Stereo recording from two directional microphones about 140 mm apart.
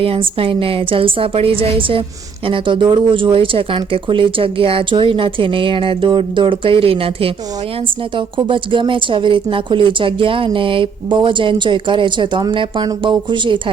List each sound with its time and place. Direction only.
0.0 s speech: 40° right (ahead or behind)
8.4 s speech: 35° right (ahead or behind)